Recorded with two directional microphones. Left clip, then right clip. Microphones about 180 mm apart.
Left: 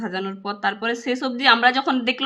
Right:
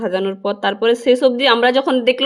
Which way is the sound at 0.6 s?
25° right (ahead or behind).